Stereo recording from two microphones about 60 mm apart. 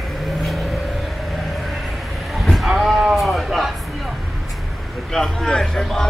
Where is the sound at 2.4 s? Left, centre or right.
Centre.